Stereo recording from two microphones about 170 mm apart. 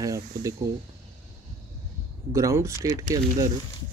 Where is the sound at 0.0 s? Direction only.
20° right (ahead or behind).